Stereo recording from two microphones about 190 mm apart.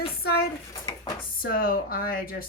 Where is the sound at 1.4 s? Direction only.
50° left (ahead or behind).